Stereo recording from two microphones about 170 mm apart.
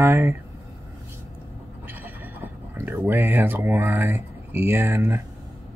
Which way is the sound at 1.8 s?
10° right (ahead or behind).